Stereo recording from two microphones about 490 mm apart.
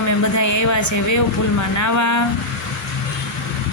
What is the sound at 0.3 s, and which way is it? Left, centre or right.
Speech, left.